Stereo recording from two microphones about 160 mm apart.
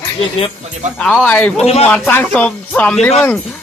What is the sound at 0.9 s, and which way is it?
Speech, 5° left (ahead or behind).